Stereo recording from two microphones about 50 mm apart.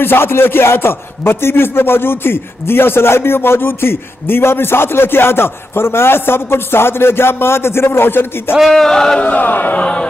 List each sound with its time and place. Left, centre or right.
0.0 s speech: left
8.5 s a sound: centre
9.2 s speech: left
9.8 s music: left